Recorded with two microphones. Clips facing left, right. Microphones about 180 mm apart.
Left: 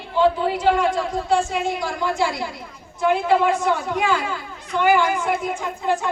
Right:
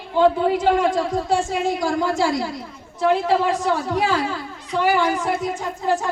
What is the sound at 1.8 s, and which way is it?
Music, 40° right (ahead or behind).